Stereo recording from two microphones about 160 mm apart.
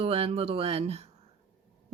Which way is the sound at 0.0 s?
40° right (ahead or behind).